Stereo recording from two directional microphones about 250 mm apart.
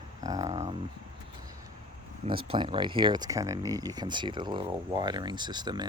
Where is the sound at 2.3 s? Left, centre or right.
Centre.